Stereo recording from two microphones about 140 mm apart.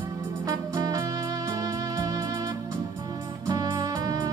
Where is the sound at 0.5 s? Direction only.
30° right (ahead or behind).